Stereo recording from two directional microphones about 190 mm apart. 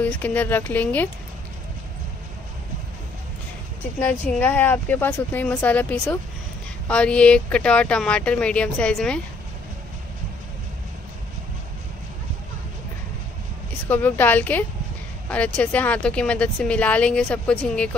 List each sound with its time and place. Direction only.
0.0 s speech: 10° left (ahead or behind)
4.1 s speech: 10° left (ahead or behind)
13.8 s speech: 10° left (ahead or behind)